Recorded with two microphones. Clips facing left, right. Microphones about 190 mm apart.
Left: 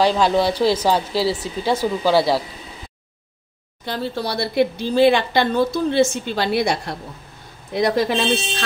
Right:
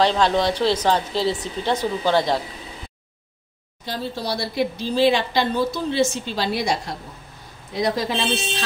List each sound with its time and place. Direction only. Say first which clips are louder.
0.0 s speech: left 2 dB; 10° left (ahead or behind)
3.8 s a woman's voice: left 3 dB; 60° left (ahead or behind)